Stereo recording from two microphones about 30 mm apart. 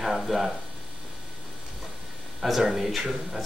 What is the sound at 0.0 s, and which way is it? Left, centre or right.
Speech, centre.